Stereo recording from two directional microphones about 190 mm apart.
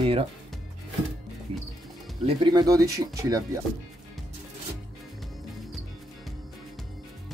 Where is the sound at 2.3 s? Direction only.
20° right (ahead or behind).